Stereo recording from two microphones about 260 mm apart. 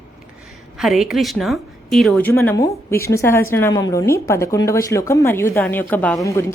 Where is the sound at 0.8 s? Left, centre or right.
Centre.